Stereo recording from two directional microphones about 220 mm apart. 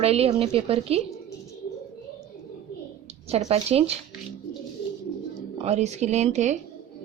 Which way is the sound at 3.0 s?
25° right (ahead or behind).